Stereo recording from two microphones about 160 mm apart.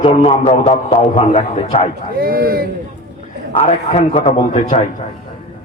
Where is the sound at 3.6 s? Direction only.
45° left (ahead or behind).